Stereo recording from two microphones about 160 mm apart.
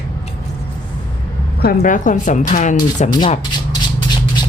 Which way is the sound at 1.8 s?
55° left (ahead or behind).